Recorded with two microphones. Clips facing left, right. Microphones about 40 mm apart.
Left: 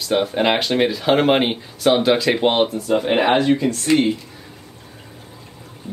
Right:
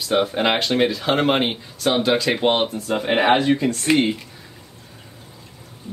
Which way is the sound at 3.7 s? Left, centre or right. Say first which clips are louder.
Left 1 dB; right.